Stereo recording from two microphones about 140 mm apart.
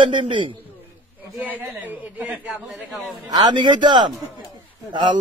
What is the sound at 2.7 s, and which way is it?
Speech, centre (ahead or behind).